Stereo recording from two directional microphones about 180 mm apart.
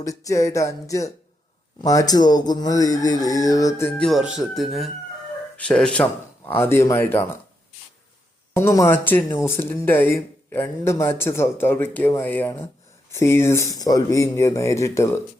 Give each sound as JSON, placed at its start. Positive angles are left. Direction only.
{"t": 0.0, "sound": "speech", "side_deg": 20}
{"t": 1.8, "sound": "chicken", "side_deg": 20}
{"t": 5.5, "sound": "speech", "side_deg": 5}
{"t": 8.5, "sound": "speech", "side_deg": 15}